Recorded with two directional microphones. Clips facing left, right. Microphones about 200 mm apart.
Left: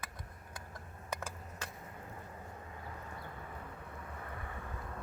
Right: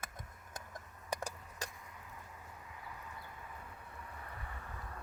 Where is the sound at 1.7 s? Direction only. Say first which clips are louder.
Left 5 dB; 45° left (ahead or behind).